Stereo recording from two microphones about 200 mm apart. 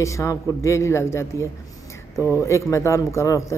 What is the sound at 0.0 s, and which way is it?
Speech, 15° left (ahead or behind).